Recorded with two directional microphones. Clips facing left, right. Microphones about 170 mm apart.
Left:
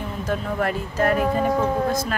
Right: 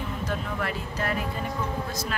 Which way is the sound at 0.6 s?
50° left (ahead or behind).